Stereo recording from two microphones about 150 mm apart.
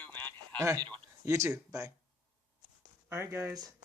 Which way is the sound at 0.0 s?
10° left (ahead or behind).